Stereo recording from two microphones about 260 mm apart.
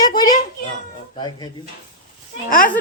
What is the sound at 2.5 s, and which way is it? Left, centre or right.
Speech, left.